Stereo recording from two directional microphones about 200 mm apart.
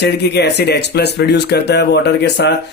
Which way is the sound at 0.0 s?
55° left (ahead or behind).